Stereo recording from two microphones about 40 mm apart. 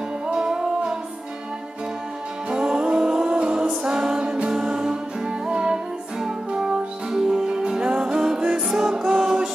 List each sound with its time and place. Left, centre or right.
0.3 s music: centre
2.5 s music: right